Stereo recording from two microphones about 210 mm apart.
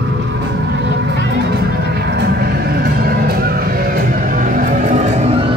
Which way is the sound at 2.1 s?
50° right (ahead or behind).